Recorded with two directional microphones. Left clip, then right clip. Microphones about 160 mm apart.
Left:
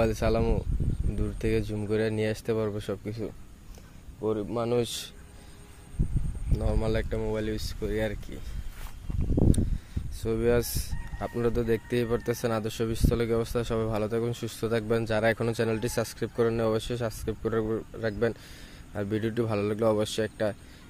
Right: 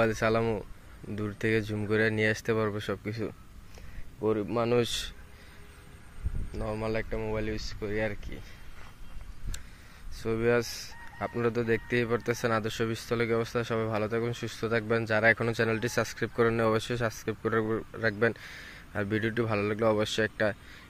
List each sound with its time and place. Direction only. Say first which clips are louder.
0.0 s speech: even; 5° left (ahead or behind)
4.2 s speech: right 1 dB; 15° right (ahead or behind)
4.8 s speech: right 2 dB; 5° left (ahead or behind)
6.5 s speech: left 2 dB; 25° left (ahead or behind)
10.2 s speech: left 1 dB; 10° left (ahead or behind)